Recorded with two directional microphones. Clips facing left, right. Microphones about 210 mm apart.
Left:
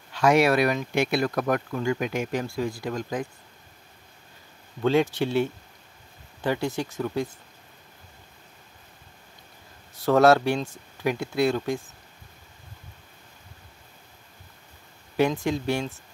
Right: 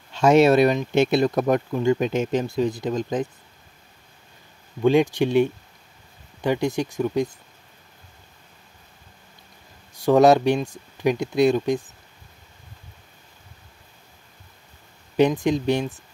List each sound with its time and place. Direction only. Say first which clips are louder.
0.1 s speech: right 5 dB; 25° right (ahead or behind)
4.8 s speech: right 4 dB; 15° right (ahead or behind)
9.9 s speech: right 3 dB; 15° right (ahead or behind)
15.1 s speech: right 5 dB; 20° right (ahead or behind)